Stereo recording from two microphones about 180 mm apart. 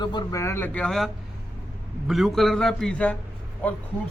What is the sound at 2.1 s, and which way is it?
A man's voice, centre (ahead or behind).